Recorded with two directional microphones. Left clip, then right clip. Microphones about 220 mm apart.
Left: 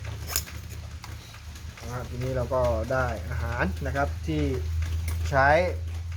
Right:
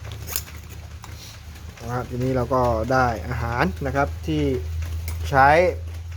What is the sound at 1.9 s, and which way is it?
Speech, 50° right (ahead or behind).